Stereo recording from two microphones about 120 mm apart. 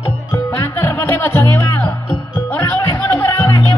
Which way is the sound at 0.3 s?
20° left (ahead or behind).